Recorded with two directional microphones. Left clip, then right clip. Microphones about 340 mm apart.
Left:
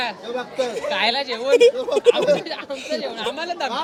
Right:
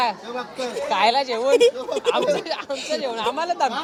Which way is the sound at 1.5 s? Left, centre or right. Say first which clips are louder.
Left 3 dB; centre.